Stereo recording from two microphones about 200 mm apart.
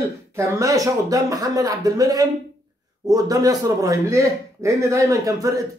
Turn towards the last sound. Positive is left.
turn(degrees=-15)  # may be behind; listen again after turning